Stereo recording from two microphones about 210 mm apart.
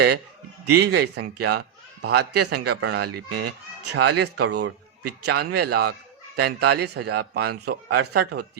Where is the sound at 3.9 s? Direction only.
90° right.